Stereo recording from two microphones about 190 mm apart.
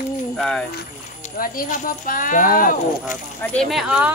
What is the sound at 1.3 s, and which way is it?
Speech, 45° left (ahead or behind).